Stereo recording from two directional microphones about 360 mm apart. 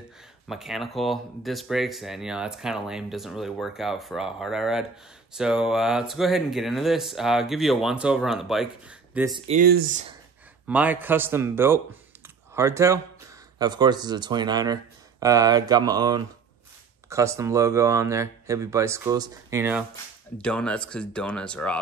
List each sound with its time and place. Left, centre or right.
0.5 s speech: centre
9.6 s speech: right
10.7 s speech: centre